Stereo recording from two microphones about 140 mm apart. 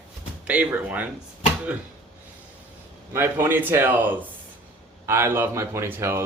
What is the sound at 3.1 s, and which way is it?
Speech, 15° right (ahead or behind).